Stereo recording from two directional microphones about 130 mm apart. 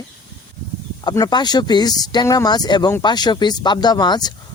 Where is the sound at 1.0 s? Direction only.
30° left (ahead or behind).